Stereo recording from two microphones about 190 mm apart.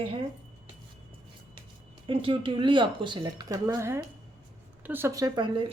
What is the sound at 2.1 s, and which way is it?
Speech, 30° right (ahead or behind).